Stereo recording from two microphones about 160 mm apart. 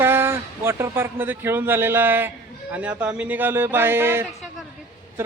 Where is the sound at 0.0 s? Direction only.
15° right (ahead or behind).